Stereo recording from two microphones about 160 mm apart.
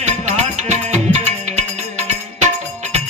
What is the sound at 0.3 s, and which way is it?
Music, 45° right (ahead or behind).